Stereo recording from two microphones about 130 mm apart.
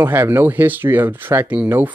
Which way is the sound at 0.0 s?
15° right (ahead or behind).